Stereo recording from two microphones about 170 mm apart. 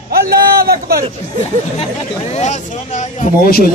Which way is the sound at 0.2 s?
65° right (ahead or behind).